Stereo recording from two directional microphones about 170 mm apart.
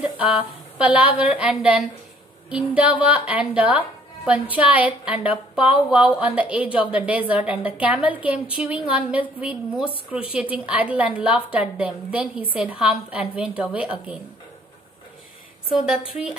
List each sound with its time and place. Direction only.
0.0 s a woman's voice: 5° right (ahead or behind)